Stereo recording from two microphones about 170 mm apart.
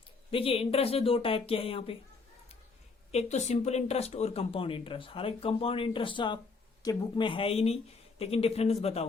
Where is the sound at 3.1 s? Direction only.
40° left (ahead or behind).